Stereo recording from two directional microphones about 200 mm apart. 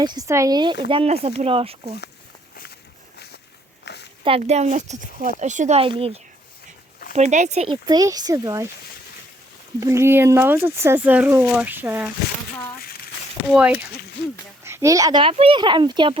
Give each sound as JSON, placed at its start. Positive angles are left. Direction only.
{"t": 0.0, "sound": "a child's voice", "side_deg": -20}
{"t": 3.8, "sound": "a sound", "side_deg": 60}
{"t": 4.2, "sound": "speech", "side_deg": -30}
{"t": 7.9, "sound": "speech", "side_deg": -20}
{"t": 9.8, "sound": "speech", "side_deg": -15}
{"t": 13.5, "sound": "a child's voice", "side_deg": -5}